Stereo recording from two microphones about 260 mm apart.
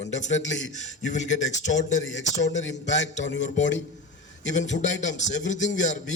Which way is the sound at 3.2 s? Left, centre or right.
Left.